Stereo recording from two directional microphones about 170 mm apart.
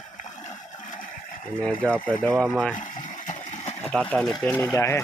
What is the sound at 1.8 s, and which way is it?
Speech, 5° left (ahead or behind).